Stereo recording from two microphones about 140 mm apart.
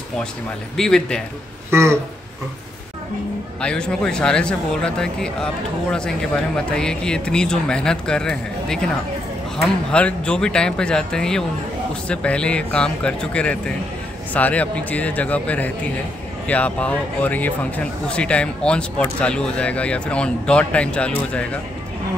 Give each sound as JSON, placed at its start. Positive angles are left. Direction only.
{"t": 0.7, "sound": "speech", "side_deg": 5}
{"t": 1.7, "sound": "speech", "side_deg": -20}
{"t": 3.6, "sound": "speech", "side_deg": 5}